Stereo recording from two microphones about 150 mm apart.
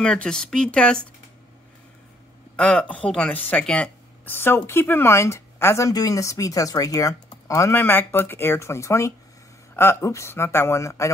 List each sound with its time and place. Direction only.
0.0 s speech: 5° left (ahead or behind)
2.5 s speech: 5° left (ahead or behind)